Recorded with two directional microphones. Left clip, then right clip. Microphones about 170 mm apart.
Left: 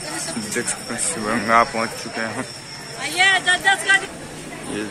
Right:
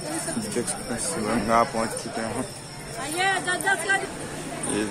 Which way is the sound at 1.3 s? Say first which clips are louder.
Left 5 dB; 5° left (ahead or behind).